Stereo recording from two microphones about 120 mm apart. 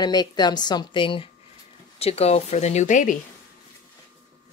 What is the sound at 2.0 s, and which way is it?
Speech, 60° left (ahead or behind).